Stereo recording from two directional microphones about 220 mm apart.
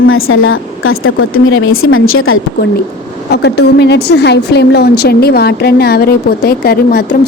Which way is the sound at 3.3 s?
50° left (ahead or behind).